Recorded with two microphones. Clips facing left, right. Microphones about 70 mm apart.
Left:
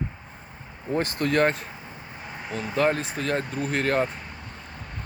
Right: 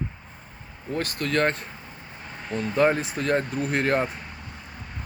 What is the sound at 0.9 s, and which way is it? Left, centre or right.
Speech, left.